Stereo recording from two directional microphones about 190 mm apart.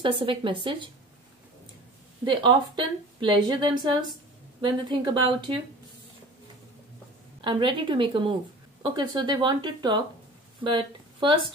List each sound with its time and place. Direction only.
0.0 s speech: 25° right (ahead or behind)
2.2 s speech: 25° right (ahead or behind)
7.4 s speech: 25° right (ahead or behind)